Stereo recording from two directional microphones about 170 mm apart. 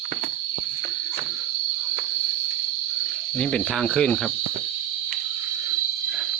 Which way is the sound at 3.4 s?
5° left (ahead or behind).